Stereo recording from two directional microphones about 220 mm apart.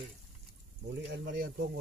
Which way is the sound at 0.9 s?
50° right (ahead or behind).